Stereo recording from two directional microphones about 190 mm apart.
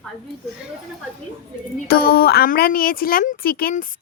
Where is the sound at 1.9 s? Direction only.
55° left (ahead or behind).